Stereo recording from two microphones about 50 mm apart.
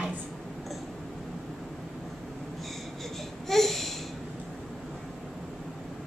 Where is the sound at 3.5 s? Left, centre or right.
Centre.